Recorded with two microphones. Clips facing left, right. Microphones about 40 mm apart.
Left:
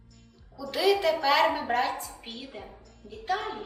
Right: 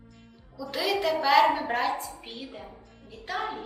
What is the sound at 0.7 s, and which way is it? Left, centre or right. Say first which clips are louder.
Music: left 3 dB; centre.